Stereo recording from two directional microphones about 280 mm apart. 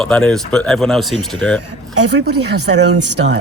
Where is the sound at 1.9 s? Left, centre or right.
Right.